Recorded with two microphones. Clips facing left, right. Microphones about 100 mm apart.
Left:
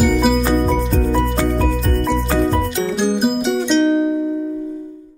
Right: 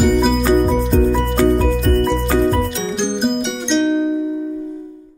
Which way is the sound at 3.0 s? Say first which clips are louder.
Even; 5° left (ahead or behind).